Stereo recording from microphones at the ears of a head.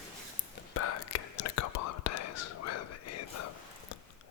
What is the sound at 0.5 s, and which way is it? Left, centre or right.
Whispering, left.